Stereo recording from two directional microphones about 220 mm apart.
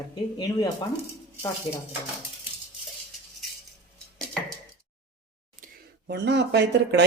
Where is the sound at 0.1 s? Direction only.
20° left (ahead or behind).